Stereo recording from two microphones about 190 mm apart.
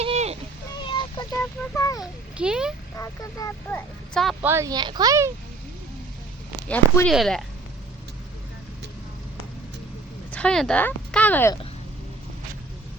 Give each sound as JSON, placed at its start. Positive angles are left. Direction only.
{"t": 0.0, "sound": "a sound", "side_deg": -35}
{"t": 0.8, "sound": "a sound", "side_deg": 25}
{"t": 2.4, "sound": "speech", "side_deg": -5}
{"t": 2.9, "sound": "speech", "side_deg": 15}
{"t": 4.4, "sound": "a child's voice", "side_deg": -15}
{"t": 6.7, "sound": "speech", "side_deg": 5}
{"t": 10.3, "sound": "speech", "side_deg": 5}